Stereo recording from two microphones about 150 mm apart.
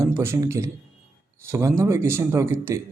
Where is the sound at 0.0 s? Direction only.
15° right (ahead or behind).